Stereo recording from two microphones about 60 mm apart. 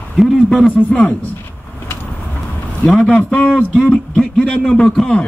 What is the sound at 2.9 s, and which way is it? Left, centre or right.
A man's voice, centre.